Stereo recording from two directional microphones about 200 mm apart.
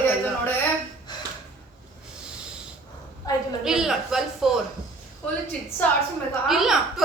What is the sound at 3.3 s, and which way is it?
Speech, 20° left (ahead or behind).